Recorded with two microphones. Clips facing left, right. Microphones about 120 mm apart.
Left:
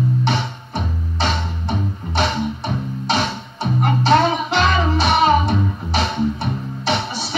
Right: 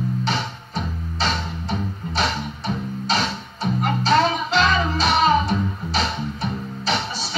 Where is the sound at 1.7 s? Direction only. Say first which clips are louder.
Left 3 dB; 65° left (ahead or behind).